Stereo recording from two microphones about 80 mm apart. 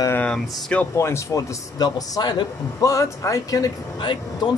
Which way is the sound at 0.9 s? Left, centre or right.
Left.